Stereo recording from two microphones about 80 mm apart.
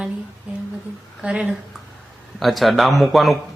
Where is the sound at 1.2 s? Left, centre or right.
Centre.